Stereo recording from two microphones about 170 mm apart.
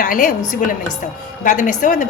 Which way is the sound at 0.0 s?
55° left (ahead or behind).